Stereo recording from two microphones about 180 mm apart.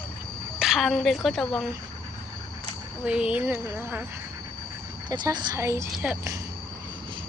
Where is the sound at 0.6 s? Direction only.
Centre (ahead or behind).